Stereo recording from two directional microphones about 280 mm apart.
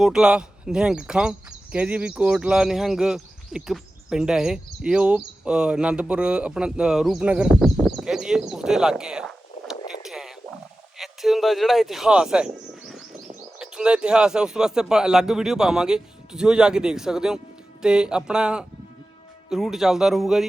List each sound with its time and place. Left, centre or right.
0.0 s speech: centre